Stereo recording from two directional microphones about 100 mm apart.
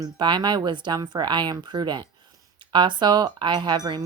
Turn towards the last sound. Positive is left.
turn(degrees=-45)  # may be behind; listen again after turning